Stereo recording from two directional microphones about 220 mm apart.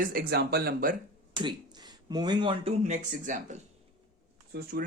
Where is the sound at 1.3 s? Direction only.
20° right (ahead or behind).